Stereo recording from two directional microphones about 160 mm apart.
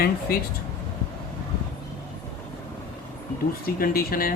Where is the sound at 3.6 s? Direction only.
65° left (ahead or behind).